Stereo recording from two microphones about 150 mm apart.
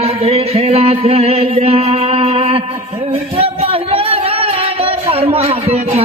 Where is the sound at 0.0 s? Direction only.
40° right (ahead or behind).